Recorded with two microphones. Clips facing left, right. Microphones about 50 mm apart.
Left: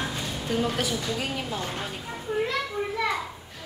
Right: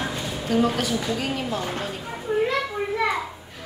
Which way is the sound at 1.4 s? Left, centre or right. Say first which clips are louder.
Right 4 dB; centre.